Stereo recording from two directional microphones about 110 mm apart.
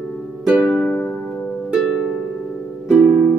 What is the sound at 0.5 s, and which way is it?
Music, 10° right (ahead or behind).